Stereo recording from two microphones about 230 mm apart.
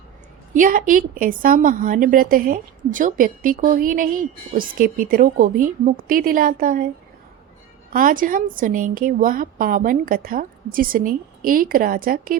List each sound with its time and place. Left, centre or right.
0.5 s a woman's voice: right
7.9 s a woman's voice: right